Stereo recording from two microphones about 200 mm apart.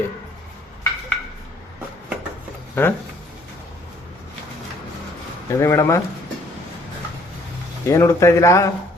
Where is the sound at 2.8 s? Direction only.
10° left (ahead or behind).